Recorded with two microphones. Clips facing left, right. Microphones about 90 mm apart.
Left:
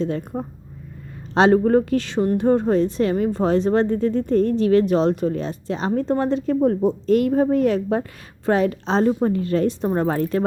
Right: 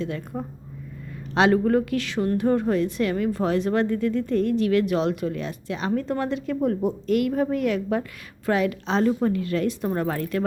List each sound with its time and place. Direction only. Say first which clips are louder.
1.3 s a woman's voice: left 4 dB; 35° left (ahead or behind)